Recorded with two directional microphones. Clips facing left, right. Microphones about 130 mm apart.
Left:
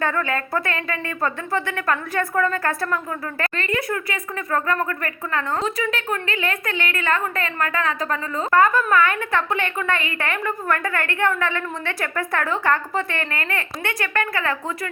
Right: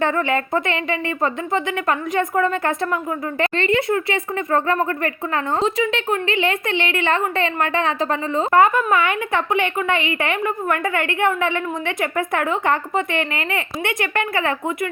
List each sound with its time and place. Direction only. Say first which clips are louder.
0.0 s speech: right 4 dB; 20° right (ahead or behind)